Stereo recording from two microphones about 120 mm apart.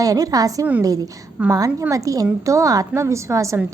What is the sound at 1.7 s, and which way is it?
Speech, 15° right (ahead or behind).